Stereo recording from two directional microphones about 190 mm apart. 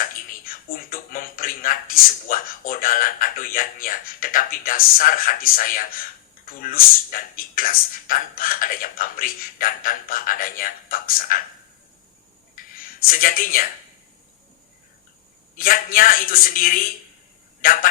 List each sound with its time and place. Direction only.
0.0 s speech: 45° left (ahead or behind)
12.5 s a sound: 50° left (ahead or behind)
15.5 s speech: 50° left (ahead or behind)